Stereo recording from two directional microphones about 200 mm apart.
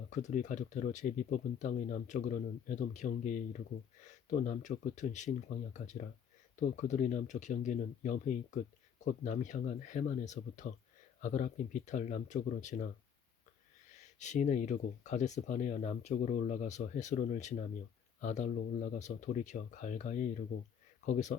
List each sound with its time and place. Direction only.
0.1 s speech: 35° left (ahead or behind)
13.9 s speech: 35° left (ahead or behind)